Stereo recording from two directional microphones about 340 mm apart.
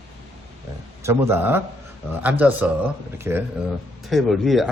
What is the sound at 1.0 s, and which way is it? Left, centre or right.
Speech, centre.